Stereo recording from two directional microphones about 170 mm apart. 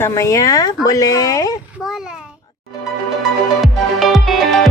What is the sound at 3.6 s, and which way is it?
Music, centre (ahead or behind).